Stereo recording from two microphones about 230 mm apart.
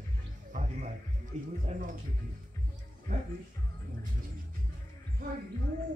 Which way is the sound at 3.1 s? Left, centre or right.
Right.